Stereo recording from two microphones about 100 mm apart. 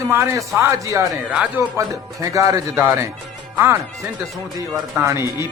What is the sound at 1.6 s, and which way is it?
Speech, 20° right (ahead or behind).